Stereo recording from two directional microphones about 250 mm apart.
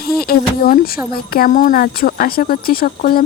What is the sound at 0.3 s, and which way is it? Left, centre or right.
Speech, left.